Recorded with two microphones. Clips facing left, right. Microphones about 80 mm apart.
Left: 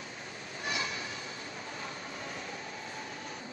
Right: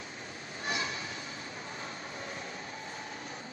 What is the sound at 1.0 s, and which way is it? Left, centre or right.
Train, right.